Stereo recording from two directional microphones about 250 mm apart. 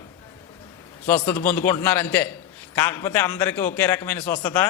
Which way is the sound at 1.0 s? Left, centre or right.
Centre.